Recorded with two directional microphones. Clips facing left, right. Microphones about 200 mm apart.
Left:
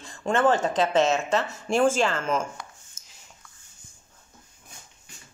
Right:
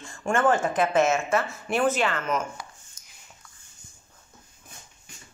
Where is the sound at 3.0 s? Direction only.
25° left (ahead or behind).